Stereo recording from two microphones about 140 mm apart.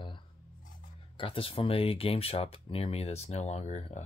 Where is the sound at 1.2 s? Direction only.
40° left (ahead or behind).